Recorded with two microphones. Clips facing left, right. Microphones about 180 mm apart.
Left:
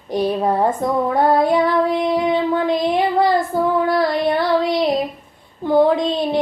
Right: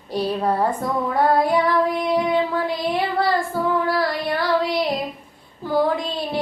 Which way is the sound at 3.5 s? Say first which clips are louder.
Left 4 dB; 20° left (ahead or behind).